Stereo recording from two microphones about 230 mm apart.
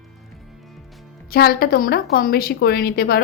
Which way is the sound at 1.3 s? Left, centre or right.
Left.